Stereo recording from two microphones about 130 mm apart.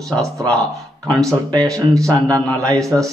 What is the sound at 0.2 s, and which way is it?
Speech, 25° right (ahead or behind).